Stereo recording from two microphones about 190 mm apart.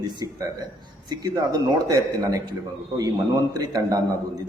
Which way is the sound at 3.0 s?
20° right (ahead or behind).